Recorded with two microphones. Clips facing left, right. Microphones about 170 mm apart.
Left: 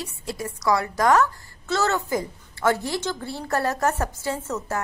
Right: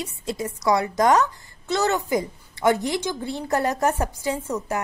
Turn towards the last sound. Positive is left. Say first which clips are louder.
# right 2 dB
turn(degrees=-15)  # may be behind; listen again after turning